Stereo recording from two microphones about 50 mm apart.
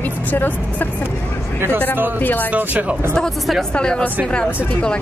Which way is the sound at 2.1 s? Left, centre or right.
Left.